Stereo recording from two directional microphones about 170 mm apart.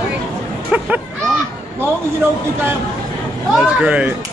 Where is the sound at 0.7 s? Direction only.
10° right (ahead or behind).